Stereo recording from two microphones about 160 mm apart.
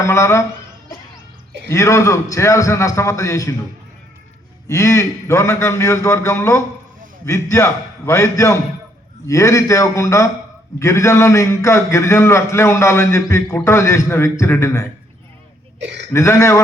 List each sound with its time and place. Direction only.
0.0 s a man's voice: 15° left (ahead or behind)
1.7 s a man's voice: 20° left (ahead or behind)
4.7 s a man's voice: 20° left (ahead or behind)
15.8 s speech: 90° right
16.1 s a man's voice: 15° left (ahead or behind)